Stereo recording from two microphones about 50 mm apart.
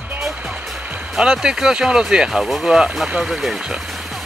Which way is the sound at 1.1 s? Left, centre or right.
Centre.